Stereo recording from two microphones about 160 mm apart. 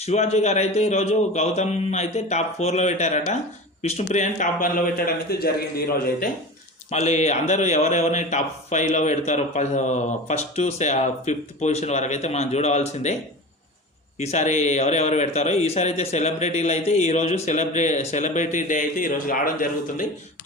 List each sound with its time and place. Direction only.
0.0 s a man's voice: 45° left (ahead or behind); by 6.3 s 70° left (ahead or behind)
6.9 s speech: 45° left (ahead or behind)
14.2 s a man's voice: 45° left (ahead or behind); by 20.1 s 60° left (ahead or behind)